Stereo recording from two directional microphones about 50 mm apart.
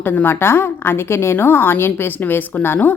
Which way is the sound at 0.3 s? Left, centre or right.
Left.